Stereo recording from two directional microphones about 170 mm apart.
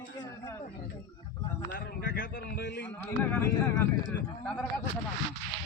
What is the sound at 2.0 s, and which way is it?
Speech, 90° left.